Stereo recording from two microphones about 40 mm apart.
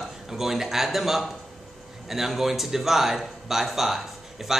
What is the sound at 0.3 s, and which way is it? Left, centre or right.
Speech, centre.